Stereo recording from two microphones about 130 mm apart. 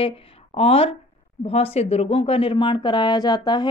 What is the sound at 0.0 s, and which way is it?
A woman's voice, 45° left (ahead or behind).